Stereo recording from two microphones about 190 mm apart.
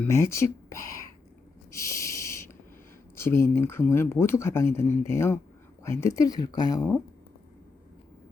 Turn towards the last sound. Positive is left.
turn(degrees=20)  # may be behind; listen again after turning